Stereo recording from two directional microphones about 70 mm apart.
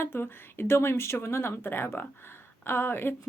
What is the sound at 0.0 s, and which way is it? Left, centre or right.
Speech, left.